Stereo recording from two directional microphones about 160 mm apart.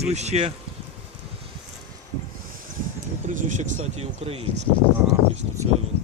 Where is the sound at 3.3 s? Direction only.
55° right (ahead or behind).